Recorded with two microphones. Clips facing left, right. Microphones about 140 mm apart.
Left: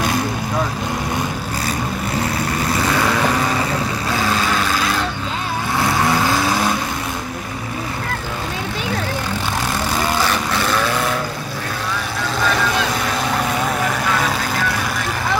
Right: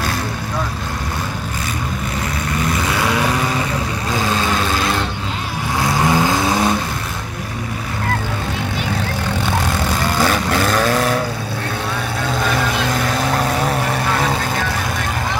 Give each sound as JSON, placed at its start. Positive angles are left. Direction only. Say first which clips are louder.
{"t": 6.0, "sound": "vehicle", "louder": "right 1 dB", "side_deg": -20}